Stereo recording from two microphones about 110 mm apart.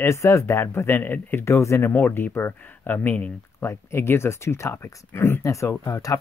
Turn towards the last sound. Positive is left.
turn(degrees=30)  # may be behind; listen again after turning